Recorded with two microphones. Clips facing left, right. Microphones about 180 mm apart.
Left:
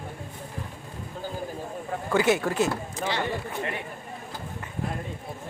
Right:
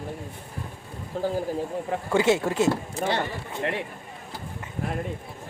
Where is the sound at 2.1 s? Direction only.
25° right (ahead or behind).